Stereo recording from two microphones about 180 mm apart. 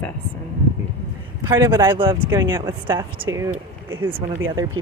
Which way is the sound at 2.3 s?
15° right (ahead or behind).